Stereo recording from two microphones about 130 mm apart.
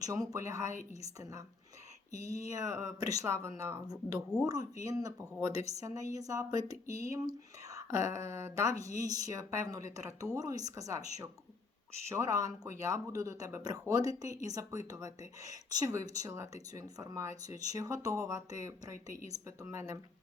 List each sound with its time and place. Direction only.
0.0 s speech: 30° right (ahead or behind)
2.1 s speech: 25° right (ahead or behind)
12.0 s speech: 25° right (ahead or behind)